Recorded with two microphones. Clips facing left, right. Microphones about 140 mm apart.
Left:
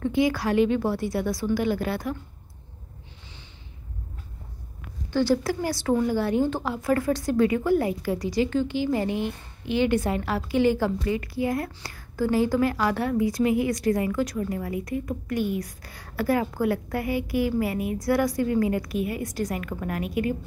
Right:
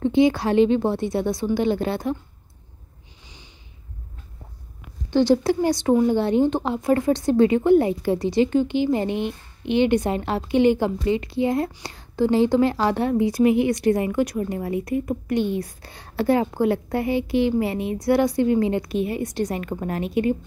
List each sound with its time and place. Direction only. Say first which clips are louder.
0.0 s a woman's voice: right 5 dB; 25° right (ahead or behind)
5.1 s a woman's voice: right 5 dB; 20° right (ahead or behind)